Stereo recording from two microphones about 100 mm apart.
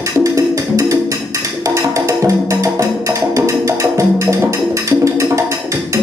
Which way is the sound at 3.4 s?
30° right (ahead or behind).